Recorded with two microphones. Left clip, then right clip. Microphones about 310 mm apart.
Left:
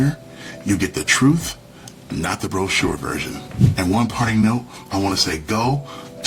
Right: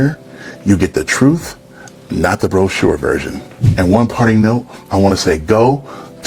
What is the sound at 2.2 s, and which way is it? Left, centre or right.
Speech, right.